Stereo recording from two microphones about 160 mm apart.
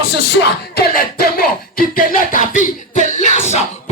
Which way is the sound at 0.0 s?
85° left.